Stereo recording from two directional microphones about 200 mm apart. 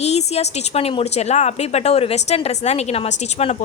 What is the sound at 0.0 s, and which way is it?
A woman's voice, 30° left (ahead or behind).